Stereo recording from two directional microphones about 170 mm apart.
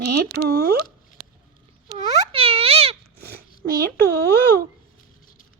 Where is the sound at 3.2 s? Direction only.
65° right (ahead or behind).